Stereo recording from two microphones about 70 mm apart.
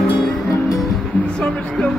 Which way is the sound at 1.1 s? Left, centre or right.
Centre.